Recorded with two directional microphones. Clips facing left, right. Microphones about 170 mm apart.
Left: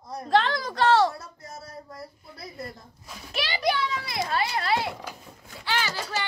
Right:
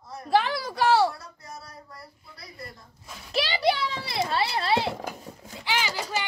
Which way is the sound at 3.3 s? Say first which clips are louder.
Right 2 dB; 30° right (ahead or behind).